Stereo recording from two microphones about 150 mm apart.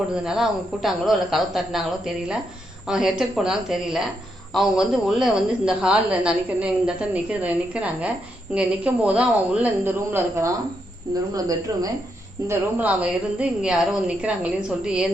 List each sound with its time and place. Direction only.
0.1 s a woman's voice: 5° right (ahead or behind); by 11.9 s 25° right (ahead or behind)
12.5 s a woman's voice: 10° right (ahead or behind)